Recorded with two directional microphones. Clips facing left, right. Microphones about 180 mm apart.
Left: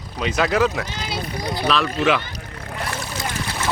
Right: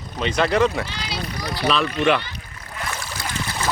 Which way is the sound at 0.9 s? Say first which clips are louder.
Left 2 dB; 50° left (ahead or behind).